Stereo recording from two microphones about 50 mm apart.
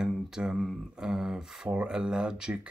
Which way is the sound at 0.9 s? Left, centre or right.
Centre.